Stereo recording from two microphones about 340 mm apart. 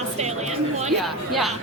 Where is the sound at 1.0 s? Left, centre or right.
Centre.